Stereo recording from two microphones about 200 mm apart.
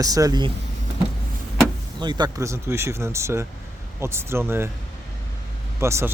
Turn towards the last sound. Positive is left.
turn(degrees=-15)  # may be behind; listen again after turning